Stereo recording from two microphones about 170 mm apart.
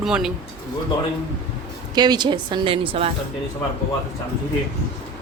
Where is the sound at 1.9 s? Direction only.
25° right (ahead or behind).